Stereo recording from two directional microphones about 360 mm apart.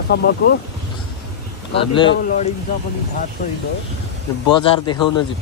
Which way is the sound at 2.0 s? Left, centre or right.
Left.